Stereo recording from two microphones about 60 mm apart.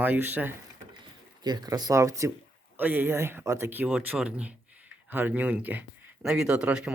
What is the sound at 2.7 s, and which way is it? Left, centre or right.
Speech, right.